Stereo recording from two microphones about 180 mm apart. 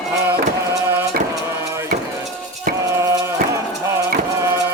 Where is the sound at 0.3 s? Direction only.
15° right (ahead or behind).